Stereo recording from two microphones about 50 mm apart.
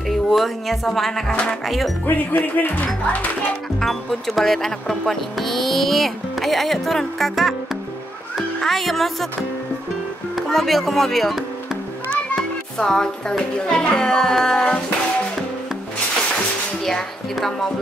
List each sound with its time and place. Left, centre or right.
0.1 s speech: centre
2.0 s speech: left
3.8 s speech: centre
8.5 s speech: centre
10.3 s a child's voice: centre
16.8 s a child's voice: centre